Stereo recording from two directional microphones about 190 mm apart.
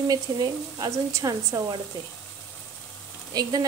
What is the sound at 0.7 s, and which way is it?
Speech, 20° right (ahead or behind).